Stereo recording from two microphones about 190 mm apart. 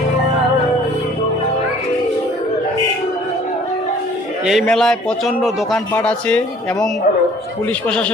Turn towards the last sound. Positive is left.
turn(degrees=5)  # may be behind; listen again after turning